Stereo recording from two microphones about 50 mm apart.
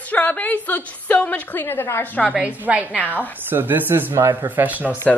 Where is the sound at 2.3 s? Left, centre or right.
Right.